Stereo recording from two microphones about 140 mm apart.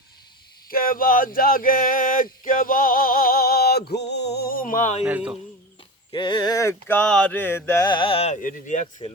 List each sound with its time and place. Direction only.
0.7 s a sound: 90° left; by 5.0 s 60° left (ahead or behind)
5.0 s speech: 10° right (ahead or behind)
6.1 s mantra: 35° left (ahead or behind); by 7.9 s 15° left (ahead or behind)
7.9 s speech: 35° left (ahead or behind)
8.3 s speech: 65° left (ahead or behind)